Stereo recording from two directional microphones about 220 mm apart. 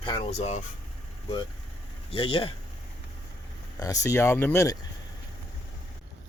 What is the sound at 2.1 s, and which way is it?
Speech, 25° left (ahead or behind).